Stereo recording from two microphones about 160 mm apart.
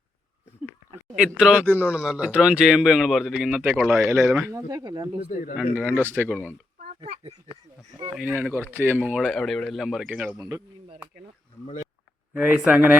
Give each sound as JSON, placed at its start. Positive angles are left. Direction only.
{"t": 1.1, "sound": "speech", "side_deg": -5}
{"t": 5.2, "sound": "speech", "side_deg": 60}
{"t": 5.7, "sound": "speech", "side_deg": -10}
{"t": 8.2, "sound": "speech", "side_deg": -10}
{"t": 12.3, "sound": "speech", "side_deg": -10}